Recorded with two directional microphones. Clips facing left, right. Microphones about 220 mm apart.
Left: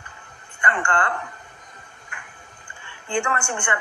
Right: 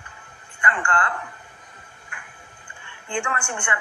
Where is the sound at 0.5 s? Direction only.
40° left (ahead or behind).